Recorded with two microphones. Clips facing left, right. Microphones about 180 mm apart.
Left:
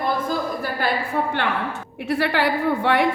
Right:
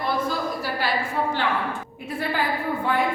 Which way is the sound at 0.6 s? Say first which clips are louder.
Left 2 dB; 55° left (ahead or behind).